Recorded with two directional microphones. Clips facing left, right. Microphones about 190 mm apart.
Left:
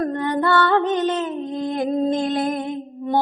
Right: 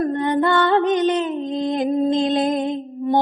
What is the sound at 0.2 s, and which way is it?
Music, 20° right (ahead or behind).